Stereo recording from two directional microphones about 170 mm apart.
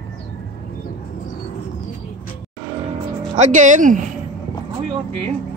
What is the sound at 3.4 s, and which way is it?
Speech, 45° right (ahead or behind).